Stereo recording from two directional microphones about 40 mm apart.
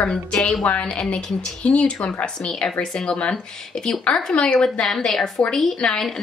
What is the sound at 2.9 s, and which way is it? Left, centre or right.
A woman's voice, left.